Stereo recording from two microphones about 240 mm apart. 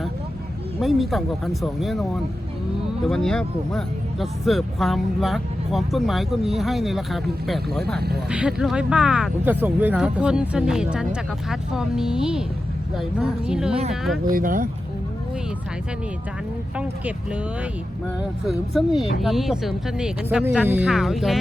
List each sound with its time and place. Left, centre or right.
0.8 s speech: centre
7.9 s speech: right
8.3 s speech: centre
14.3 s speech: right
16.7 s speech: centre